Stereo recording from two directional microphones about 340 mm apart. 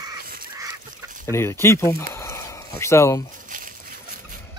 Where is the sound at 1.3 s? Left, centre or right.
Centre.